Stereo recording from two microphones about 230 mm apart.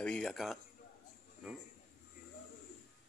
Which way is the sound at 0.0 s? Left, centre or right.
Centre.